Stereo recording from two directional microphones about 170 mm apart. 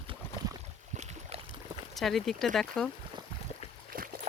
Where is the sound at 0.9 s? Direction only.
40° right (ahead or behind).